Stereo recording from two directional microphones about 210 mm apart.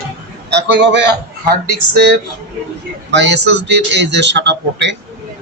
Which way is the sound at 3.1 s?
55° right (ahead or behind).